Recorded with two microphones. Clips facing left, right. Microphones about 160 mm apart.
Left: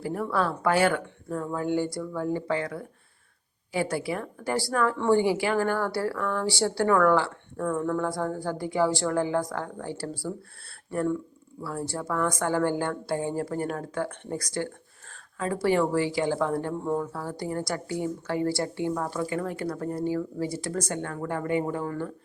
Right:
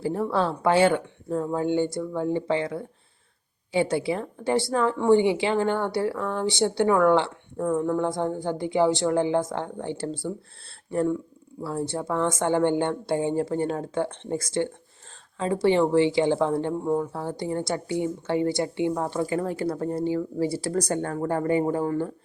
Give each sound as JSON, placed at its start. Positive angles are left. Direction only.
{"t": 0.0, "sound": "speech", "side_deg": -25}
{"t": 11.6, "sound": "speech", "side_deg": -25}